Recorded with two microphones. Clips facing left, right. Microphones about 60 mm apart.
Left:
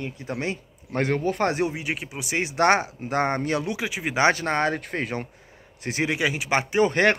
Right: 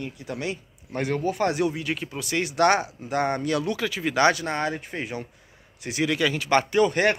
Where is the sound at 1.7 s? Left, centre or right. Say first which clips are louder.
Right 1 dB; centre.